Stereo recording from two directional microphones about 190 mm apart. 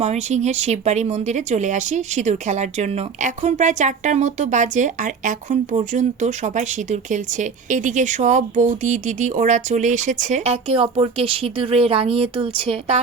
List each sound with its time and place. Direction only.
0.0 s speech: 35° right (ahead or behind)